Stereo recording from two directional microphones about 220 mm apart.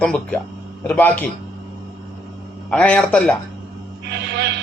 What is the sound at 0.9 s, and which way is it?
Speech, 10° left (ahead or behind).